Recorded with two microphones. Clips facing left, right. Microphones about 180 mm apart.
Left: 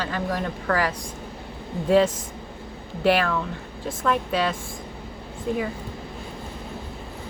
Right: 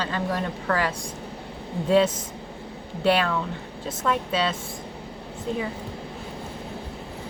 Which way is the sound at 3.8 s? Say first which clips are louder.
Left 2 dB; 20° right (ahead or behind).